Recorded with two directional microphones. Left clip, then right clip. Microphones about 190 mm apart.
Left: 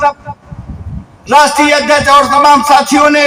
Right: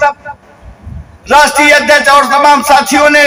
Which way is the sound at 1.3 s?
35° right (ahead or behind).